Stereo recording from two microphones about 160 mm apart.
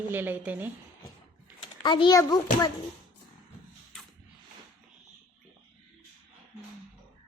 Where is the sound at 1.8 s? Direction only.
30° left (ahead or behind).